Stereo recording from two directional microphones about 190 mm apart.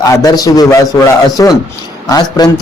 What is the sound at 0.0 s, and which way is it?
A man's voice, 20° left (ahead or behind).